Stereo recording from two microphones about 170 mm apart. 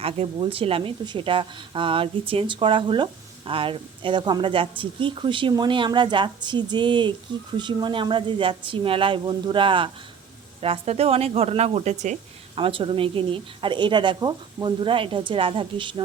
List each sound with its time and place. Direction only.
0.0 s a woman's voice: 35° right (ahead or behind)
12.5 s a woman's voice: 30° right (ahead or behind)